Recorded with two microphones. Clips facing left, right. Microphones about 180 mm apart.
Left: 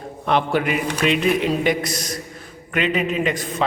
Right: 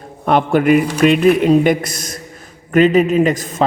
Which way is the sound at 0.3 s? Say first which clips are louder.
Right 7 dB; 50° right (ahead or behind).